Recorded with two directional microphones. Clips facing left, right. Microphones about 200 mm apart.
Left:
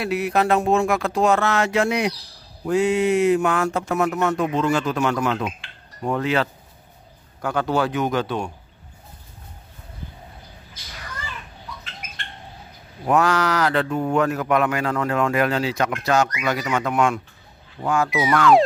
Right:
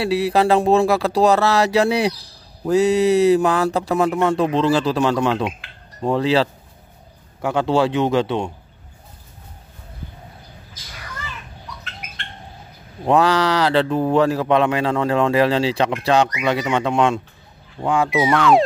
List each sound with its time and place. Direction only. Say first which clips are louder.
0.0 s speech: right 4 dB; 30° right (ahead or behind)
13.0 s speech: right 3 dB; 30° right (ahead or behind)